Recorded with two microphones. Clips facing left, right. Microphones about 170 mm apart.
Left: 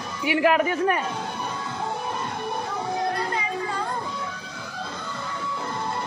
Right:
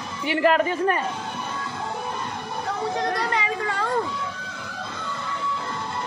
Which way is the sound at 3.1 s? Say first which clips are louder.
Right 2 dB; 80° right.